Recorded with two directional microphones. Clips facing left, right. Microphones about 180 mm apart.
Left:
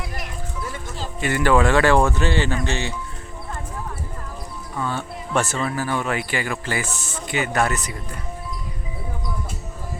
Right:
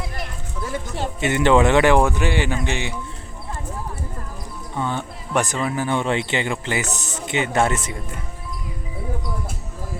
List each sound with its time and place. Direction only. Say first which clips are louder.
1.2 s speech: right 2 dB; 20° right (ahead or behind)
4.7 s speech: right 1 dB; 20° right (ahead or behind)